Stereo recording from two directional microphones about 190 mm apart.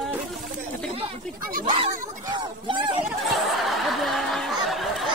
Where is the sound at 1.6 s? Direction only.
25° right (ahead or behind).